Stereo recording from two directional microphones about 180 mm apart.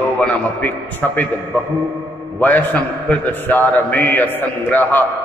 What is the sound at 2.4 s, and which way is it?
A man's voice, 10° left (ahead or behind).